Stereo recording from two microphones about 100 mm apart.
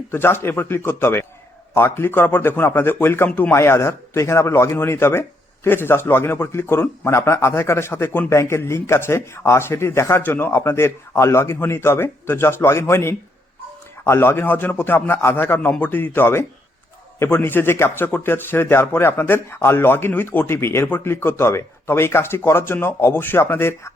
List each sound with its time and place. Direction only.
0.1 s a man's voice: 25° left (ahead or behind)
3.5 s a man's voice: 25° left (ahead or behind)